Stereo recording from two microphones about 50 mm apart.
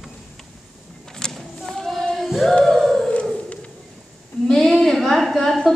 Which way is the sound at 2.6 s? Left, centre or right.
Centre.